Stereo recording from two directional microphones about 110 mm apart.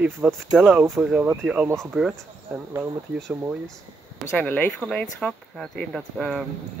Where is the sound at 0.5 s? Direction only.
10° right (ahead or behind).